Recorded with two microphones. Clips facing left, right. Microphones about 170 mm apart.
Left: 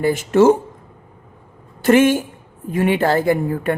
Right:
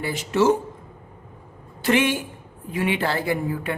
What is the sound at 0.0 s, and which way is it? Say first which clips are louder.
Speech: left 7 dB; 50° left (ahead or behind).